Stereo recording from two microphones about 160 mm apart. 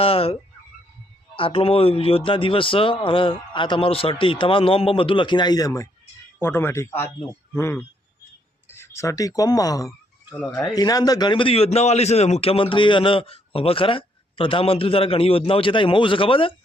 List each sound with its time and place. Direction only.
0.0 s a man's voice: 35° left (ahead or behind)
1.4 s a man's voice: 35° left (ahead or behind)